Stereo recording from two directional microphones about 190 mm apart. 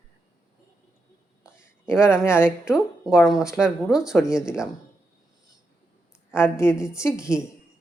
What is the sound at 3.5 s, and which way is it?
Speech, 5° right (ahead or behind).